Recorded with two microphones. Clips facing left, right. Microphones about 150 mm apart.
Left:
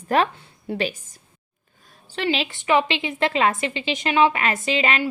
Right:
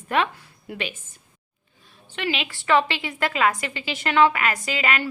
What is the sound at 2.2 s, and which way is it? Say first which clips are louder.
Speech: left 4 dB; 35° left (ahead or behind).